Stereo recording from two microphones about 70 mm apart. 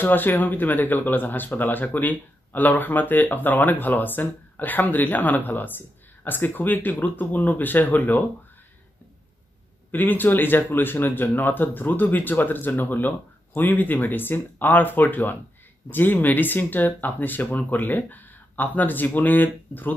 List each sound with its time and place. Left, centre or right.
0.0 s speech: left
9.8 s speech: left